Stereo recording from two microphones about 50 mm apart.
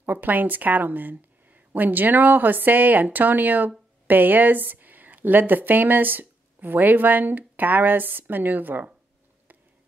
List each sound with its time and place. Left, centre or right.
0.0 s a woman's voice: right